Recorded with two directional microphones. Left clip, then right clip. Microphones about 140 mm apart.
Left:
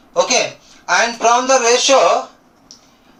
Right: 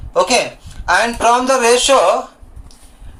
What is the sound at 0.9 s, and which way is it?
Speech, 70° right (ahead or behind).